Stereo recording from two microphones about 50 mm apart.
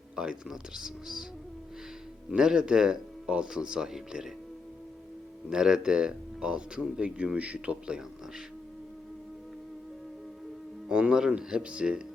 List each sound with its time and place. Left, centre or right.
0.2 s speech: centre
2.3 s speech: centre
5.5 s speech: centre
10.8 s speech: centre